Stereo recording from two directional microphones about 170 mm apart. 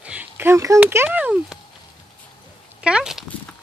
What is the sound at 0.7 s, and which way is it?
Speech, 10° right (ahead or behind).